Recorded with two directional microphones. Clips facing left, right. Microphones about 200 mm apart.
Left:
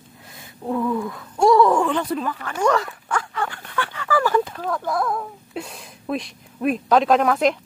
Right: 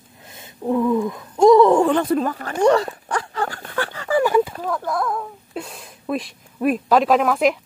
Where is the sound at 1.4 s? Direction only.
20° right (ahead or behind).